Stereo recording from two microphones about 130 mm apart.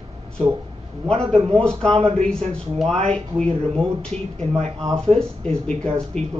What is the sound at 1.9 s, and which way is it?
Speech, 50° right (ahead or behind).